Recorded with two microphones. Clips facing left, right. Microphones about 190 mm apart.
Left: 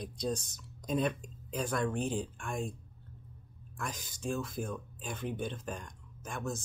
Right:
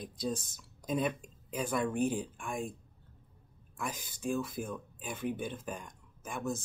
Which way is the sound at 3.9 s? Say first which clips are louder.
Even; 55° right (ahead or behind).